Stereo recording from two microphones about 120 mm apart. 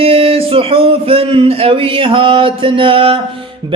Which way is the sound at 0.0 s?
50° right (ahead or behind).